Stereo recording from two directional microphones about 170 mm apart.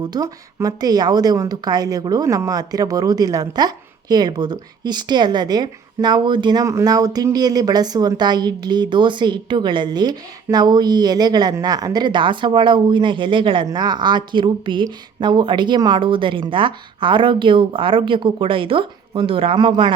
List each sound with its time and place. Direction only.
0.0 s a woman's voice: 20° right (ahead or behind)